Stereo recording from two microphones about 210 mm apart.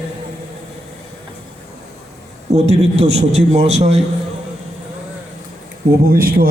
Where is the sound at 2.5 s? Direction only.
30° right (ahead or behind).